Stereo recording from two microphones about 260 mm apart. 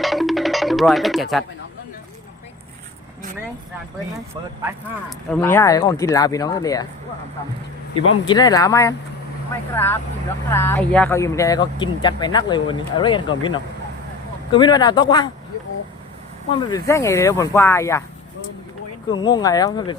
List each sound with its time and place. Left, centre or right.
0.0 s music: centre
5.0 s speech: centre
8.3 s speech: centre
16.5 s speech: centre
19.2 s speech: centre